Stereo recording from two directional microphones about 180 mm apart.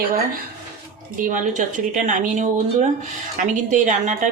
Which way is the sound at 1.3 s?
45° right (ahead or behind).